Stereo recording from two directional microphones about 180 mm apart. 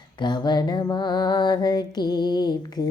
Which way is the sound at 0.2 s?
25° left (ahead or behind).